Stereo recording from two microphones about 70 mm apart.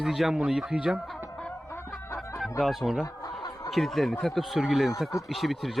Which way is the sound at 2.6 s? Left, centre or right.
Centre.